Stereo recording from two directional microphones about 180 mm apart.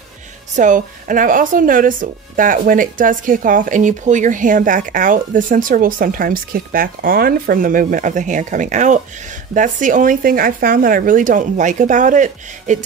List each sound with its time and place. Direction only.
0.6 s speech: 45° right (ahead or behind)